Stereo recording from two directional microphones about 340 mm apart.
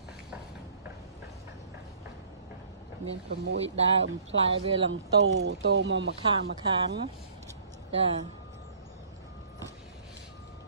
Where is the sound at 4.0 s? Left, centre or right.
Right.